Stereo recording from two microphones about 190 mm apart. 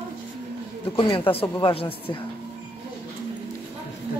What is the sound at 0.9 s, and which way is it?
Speech, 25° left (ahead or behind).